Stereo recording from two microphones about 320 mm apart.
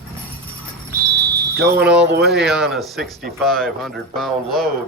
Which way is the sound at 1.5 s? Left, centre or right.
Right.